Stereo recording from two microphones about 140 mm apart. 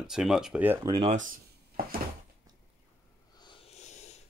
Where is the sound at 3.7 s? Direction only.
55° left (ahead or behind).